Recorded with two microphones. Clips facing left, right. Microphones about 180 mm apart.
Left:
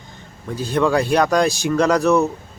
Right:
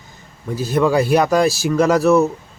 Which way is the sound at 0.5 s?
10° right (ahead or behind).